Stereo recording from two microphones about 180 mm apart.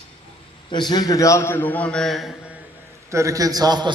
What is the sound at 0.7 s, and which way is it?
A man's voice, 25° left (ahead or behind).